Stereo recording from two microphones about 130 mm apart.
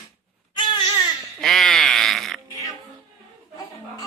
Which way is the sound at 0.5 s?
35° left (ahead or behind).